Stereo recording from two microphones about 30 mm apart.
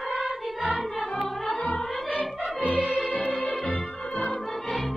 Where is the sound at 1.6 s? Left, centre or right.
Left.